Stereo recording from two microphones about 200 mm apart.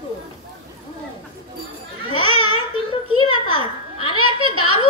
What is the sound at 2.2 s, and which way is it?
Babbling, 90° right.